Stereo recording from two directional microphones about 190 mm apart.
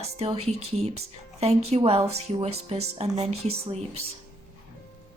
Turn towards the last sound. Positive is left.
turn(degrees=-35)  # may be behind; listen again after turning